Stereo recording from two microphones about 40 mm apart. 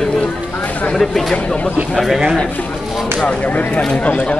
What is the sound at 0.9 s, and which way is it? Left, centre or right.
Speech, centre.